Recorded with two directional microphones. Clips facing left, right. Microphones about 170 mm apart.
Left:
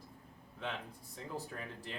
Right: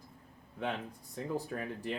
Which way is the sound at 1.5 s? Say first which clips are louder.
Right 8 dB; 55° right (ahead or behind).